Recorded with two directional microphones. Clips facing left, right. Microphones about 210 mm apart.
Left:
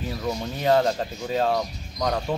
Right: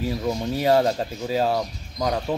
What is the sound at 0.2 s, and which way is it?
Speech, 15° right (ahead or behind).